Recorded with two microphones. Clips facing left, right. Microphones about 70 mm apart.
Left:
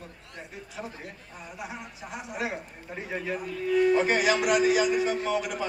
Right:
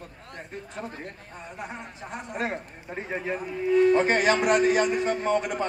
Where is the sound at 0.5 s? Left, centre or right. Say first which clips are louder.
Right 3 dB; centre.